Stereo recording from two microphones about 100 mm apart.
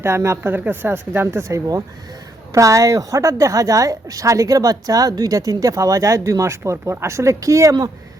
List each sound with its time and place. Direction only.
0.0 s a woman's voice: 30° right (ahead or behind)